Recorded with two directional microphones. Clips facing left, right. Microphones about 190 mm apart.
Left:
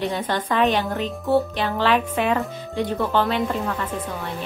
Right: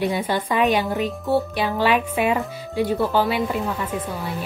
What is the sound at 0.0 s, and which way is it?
Speech, 10° right (ahead or behind).